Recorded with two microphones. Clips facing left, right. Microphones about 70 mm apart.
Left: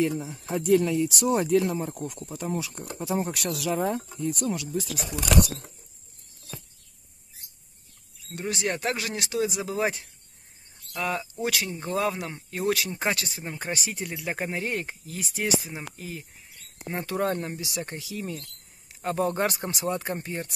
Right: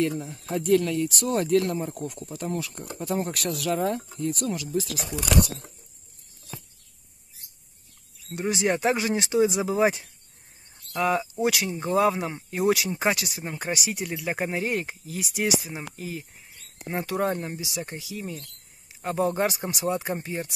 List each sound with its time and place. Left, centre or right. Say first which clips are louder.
0.0 s speech: even; centre
8.3 s speech: right 4 dB; centre